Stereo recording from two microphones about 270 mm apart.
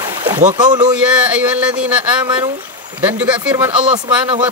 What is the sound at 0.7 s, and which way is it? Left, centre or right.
Speech, centre.